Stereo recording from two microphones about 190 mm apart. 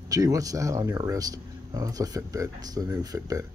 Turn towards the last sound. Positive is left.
turn(degrees=-15)  # may be behind; listen again after turning